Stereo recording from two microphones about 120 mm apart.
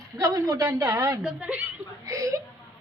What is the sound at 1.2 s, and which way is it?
Speech, 10° right (ahead or behind).